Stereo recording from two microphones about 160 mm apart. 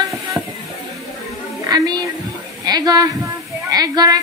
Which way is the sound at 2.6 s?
25° right (ahead or behind).